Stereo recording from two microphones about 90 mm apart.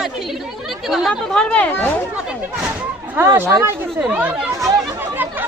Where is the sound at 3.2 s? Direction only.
30° right (ahead or behind).